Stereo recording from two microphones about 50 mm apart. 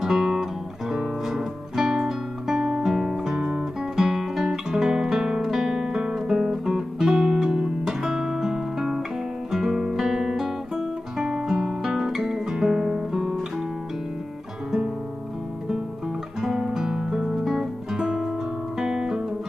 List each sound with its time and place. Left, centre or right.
0.0 s music: centre
3.9 s guitar: centre
11.1 s music: centre
16.3 s music: centre
18.8 s guitar: centre